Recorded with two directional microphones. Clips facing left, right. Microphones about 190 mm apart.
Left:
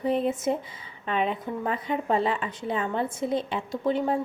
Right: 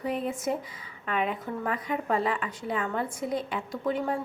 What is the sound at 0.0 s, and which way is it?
A woman's voice, 25° left (ahead or behind).